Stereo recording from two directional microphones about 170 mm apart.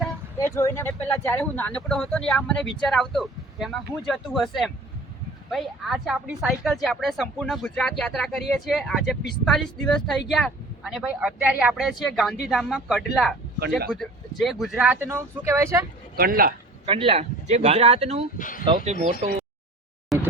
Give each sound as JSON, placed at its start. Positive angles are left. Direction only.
{"t": 0.3, "sound": "speech", "side_deg": 15}
{"t": 16.1, "sound": "speech", "side_deg": -60}
{"t": 16.8, "sound": "speech", "side_deg": -35}
{"t": 18.3, "sound": "speech", "side_deg": 50}
{"t": 18.6, "sound": "speech", "side_deg": -30}
{"t": 20.1, "sound": "a sound", "side_deg": 0}